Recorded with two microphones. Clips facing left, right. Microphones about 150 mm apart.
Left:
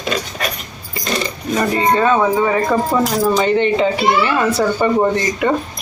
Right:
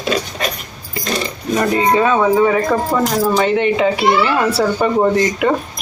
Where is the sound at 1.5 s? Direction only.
10° right (ahead or behind).